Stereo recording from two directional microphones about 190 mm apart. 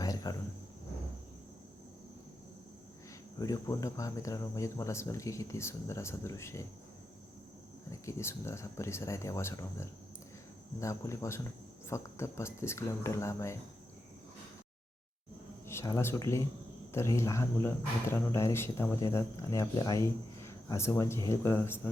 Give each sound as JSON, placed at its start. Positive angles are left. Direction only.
{"t": 0.0, "sound": "cricket", "side_deg": 20}
{"t": 3.3, "sound": "speech", "side_deg": 20}
{"t": 7.9, "sound": "speech", "side_deg": 15}
{"t": 15.6, "sound": "speech", "side_deg": 15}